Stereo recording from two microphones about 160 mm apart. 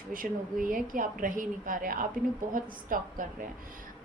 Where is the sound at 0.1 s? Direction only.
60° right (ahead or behind).